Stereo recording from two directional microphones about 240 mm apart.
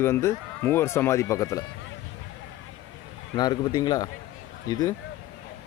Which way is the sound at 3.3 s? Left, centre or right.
Centre.